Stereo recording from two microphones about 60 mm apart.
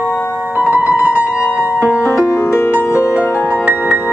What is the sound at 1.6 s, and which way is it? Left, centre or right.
Music, left.